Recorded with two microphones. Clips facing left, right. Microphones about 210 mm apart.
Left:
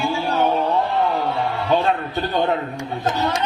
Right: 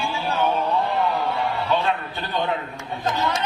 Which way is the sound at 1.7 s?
45° left (ahead or behind).